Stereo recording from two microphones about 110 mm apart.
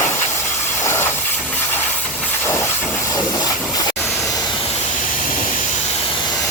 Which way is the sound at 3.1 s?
35° left (ahead or behind).